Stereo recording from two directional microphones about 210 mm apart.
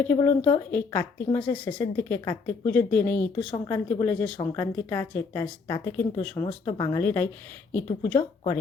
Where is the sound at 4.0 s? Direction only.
5° left (ahead or behind).